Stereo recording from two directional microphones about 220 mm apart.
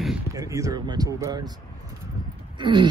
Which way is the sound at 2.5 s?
20° right (ahead or behind).